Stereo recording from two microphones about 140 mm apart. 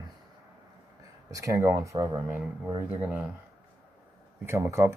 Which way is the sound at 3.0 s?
10° right (ahead or behind).